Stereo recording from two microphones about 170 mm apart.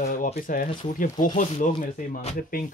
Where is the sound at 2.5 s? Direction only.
55° left (ahead or behind).